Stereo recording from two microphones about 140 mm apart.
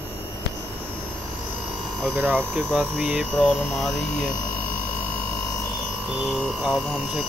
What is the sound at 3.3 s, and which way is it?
Speech, 5° left (ahead or behind).